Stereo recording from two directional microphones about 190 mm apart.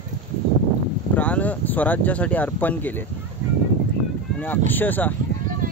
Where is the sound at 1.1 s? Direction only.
10° left (ahead or behind).